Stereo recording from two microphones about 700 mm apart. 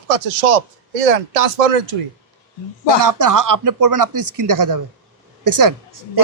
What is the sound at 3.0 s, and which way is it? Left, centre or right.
A man's voice, right.